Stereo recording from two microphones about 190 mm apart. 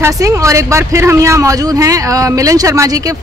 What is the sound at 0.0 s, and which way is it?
Speech, 15° right (ahead or behind).